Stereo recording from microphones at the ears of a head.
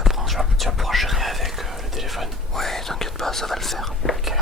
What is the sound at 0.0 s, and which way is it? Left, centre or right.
Whispering, centre.